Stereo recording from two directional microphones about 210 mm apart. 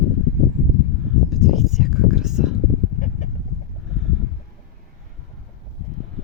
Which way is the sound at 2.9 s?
35° left (ahead or behind).